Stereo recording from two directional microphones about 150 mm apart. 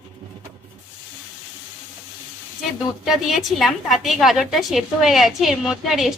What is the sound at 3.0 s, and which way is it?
A woman's voice, centre (ahead or behind).